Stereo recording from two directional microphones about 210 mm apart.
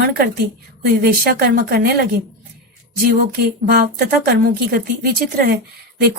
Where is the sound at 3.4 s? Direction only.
50° right (ahead or behind).